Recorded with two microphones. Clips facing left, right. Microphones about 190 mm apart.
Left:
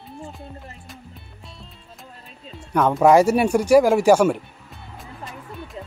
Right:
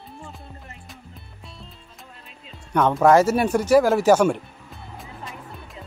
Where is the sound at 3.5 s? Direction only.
10° left (ahead or behind).